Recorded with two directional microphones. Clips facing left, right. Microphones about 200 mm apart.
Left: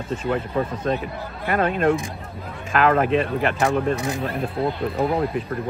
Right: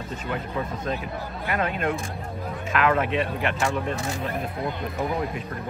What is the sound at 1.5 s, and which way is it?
Speech, 40° left (ahead or behind).